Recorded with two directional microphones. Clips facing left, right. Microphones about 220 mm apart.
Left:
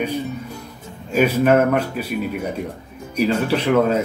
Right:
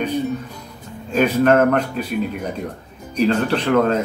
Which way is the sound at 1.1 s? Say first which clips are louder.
Even; 10° left (ahead or behind).